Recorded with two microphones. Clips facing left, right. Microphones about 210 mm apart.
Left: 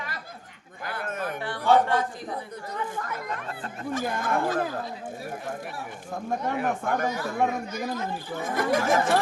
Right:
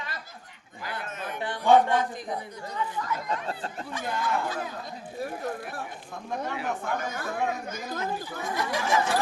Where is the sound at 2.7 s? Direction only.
50° left (ahead or behind).